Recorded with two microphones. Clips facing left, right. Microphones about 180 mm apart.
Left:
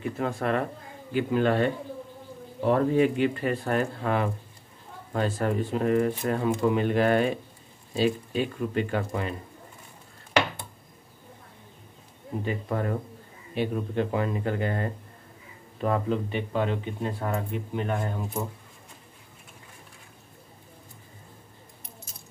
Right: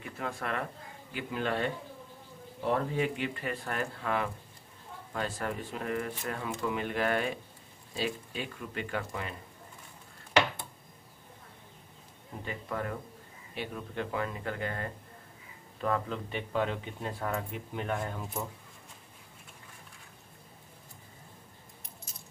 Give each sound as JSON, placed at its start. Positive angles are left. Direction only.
{"t": 0.2, "sound": "speech", "side_deg": 35}
{"t": 1.1, "sound": "speech", "side_deg": 50}
{"t": 2.7, "sound": "speech", "side_deg": 45}
{"t": 12.6, "sound": "speech", "side_deg": 35}
{"t": 16.3, "sound": "speech", "side_deg": 5}